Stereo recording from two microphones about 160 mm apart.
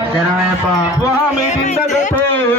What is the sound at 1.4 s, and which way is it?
Music, 45° left (ahead or behind).